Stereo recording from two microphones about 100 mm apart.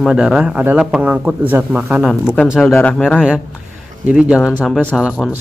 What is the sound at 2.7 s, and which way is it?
Speech, 15° left (ahead or behind).